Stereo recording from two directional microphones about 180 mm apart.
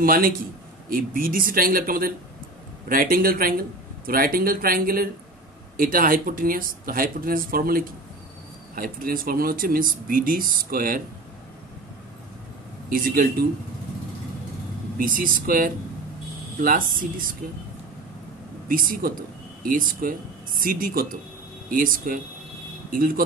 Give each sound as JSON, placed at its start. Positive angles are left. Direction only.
{"t": 0.0, "sound": "speech", "side_deg": -50}
{"t": 12.9, "sound": "speech", "side_deg": -50}
{"t": 15.0, "sound": "speech", "side_deg": -50}
{"t": 18.7, "sound": "speech", "side_deg": -50}